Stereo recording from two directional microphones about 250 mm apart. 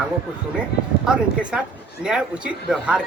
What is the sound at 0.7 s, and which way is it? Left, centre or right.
Speech, left.